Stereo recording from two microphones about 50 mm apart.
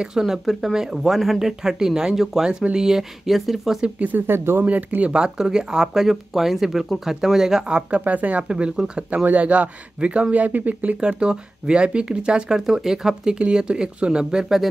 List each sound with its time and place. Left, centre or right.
0.2 s speech: centre
3.8 s speech: right
4.3 s speech: right
4.6 s speech: right
5.1 s speech: centre
8.0 s speech: right; by 9.0 s centre
9.1 s speech: right
11.0 s speech: centre